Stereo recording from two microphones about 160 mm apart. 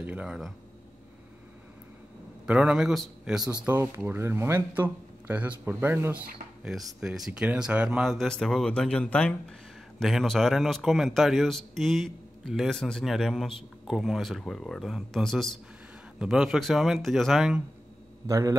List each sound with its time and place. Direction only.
0.0 s speech: 10° right (ahead or behind)
2.4 s a man's voice: 5° right (ahead or behind)
3.6 s speech: 15° right (ahead or behind)
6.6 s a man's voice: centre (ahead or behind)
18.2 s a man's voice: 20° right (ahead or behind)